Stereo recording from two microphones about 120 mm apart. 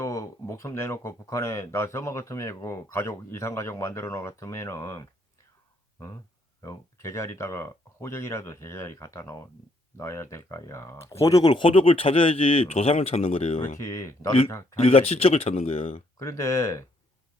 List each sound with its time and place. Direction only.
0.0 s speech: 25° left (ahead or behind)
6.6 s speech: 25° left (ahead or behind); by 13.6 s 55° left (ahead or behind)
13.7 s speech: 25° left (ahead or behind)
14.8 s speech: 55° left (ahead or behind)
16.1 s speech: 25° left (ahead or behind)